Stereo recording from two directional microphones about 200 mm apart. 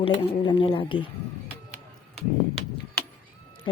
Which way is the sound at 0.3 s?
25° left (ahead or behind).